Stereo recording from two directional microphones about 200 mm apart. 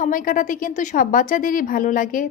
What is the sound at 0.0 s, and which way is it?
A woman's voice, 40° left (ahead or behind).